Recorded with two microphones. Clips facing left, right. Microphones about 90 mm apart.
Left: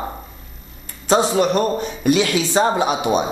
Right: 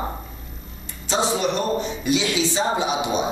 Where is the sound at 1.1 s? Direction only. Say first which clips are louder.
Left 6 dB; 50° left (ahead or behind).